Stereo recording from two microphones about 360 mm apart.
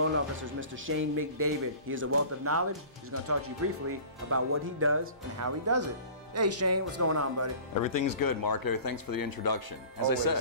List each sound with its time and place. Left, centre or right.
0.0 s speech: right
7.7 s speech: left